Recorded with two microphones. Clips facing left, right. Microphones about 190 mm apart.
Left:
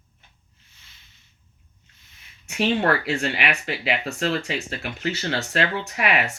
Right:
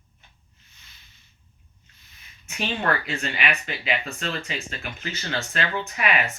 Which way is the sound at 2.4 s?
70° left (ahead or behind).